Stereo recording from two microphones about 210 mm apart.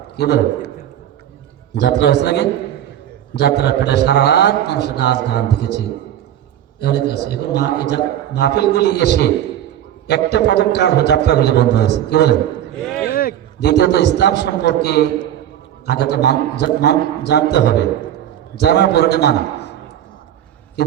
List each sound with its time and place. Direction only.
0.2 s a man's voice: 50° left (ahead or behind)
1.7 s a man's voice: 50° left (ahead or behind)
10.3 s a man's voice: 50° left (ahead or behind)
12.8 s a sound: 5° left (ahead or behind)
13.1 s a man's voice: 45° left (ahead or behind)
20.8 s a man's voice: 50° left (ahead or behind)